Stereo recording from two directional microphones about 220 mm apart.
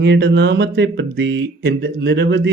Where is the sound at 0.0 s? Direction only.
50° right (ahead or behind).